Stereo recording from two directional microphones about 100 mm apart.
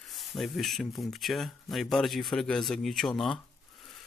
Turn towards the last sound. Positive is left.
turn(degrees=0)  # may be behind; listen again after turning